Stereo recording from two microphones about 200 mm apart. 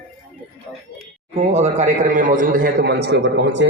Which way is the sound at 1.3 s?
35° right (ahead or behind).